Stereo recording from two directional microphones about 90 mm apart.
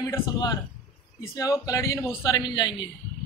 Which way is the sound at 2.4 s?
55° left (ahead or behind).